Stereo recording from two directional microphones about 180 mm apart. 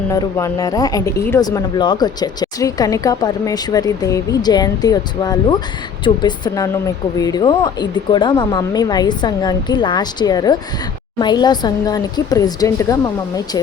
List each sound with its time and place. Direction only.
0.1 s a woman's voice: 20° left (ahead or behind)